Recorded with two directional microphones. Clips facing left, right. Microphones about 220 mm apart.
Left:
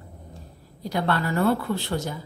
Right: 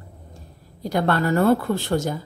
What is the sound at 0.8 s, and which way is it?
Speech, 45° right (ahead or behind).